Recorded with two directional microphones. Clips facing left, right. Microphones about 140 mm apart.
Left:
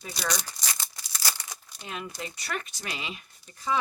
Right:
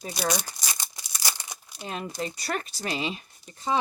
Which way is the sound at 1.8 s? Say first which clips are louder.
Right 5 dB; 35° right (ahead or behind).